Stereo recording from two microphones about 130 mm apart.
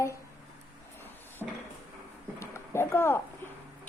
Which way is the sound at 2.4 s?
20° left (ahead or behind).